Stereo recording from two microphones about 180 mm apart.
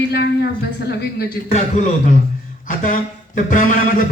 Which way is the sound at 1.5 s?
35° left (ahead or behind).